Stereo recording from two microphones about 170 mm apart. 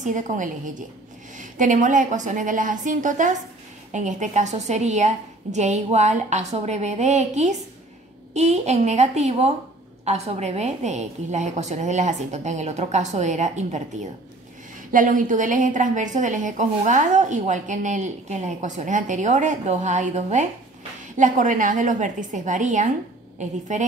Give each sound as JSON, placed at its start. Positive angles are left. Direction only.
{"t": 0.0, "sound": "a woman's voice", "side_deg": -50}
{"t": 14.9, "sound": "a woman's voice", "side_deg": -50}